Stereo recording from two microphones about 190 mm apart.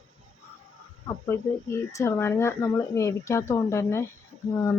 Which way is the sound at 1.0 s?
15° left (ahead or behind).